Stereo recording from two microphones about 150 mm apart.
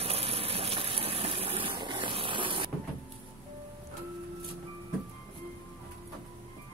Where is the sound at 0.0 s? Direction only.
40° right (ahead or behind).